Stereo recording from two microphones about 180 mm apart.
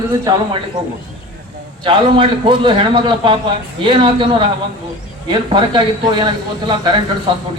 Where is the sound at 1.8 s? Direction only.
25° right (ahead or behind).